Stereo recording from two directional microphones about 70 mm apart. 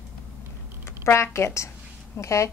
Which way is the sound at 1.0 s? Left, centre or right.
Left.